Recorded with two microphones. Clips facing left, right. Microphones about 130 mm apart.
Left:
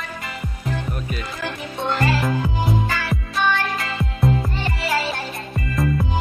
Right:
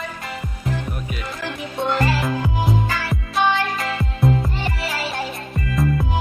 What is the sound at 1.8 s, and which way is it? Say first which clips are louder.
Music: right 1 dB; centre (ahead or behind).